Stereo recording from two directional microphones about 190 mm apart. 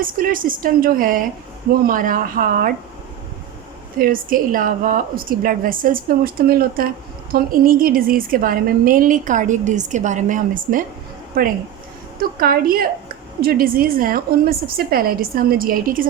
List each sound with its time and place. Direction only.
0.0 s a woman's voice: 50° right (ahead or behind)
3.9 s a woman's voice: 50° right (ahead or behind)